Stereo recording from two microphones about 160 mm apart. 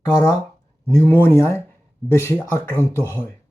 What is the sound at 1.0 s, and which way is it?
Speech, 15° left (ahead or behind).